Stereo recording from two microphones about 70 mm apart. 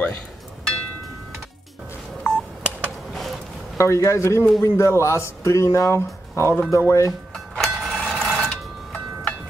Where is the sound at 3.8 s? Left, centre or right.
Left.